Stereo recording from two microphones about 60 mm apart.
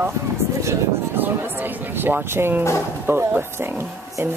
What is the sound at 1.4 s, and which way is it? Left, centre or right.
A woman's voice, right.